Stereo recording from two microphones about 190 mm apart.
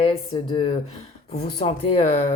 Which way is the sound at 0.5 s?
30° left (ahead or behind).